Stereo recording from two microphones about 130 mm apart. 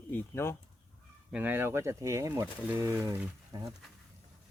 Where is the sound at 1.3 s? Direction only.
15° right (ahead or behind).